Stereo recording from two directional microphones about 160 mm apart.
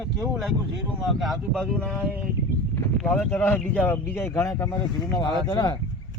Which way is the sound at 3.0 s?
5° left (ahead or behind).